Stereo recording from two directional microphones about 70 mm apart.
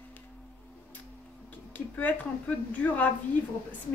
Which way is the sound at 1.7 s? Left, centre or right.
Left.